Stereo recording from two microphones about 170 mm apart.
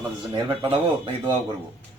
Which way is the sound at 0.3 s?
35° right (ahead or behind).